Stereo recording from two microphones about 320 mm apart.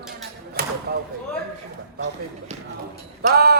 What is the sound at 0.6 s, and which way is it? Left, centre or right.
Speech, right.